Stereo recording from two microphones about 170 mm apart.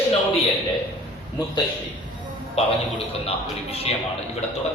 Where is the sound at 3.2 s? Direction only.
35° left (ahead or behind).